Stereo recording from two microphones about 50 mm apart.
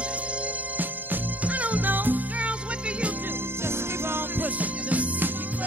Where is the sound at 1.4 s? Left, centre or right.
Right.